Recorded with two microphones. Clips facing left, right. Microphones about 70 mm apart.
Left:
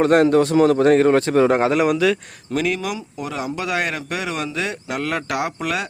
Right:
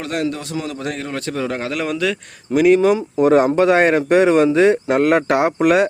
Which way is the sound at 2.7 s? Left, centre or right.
Right.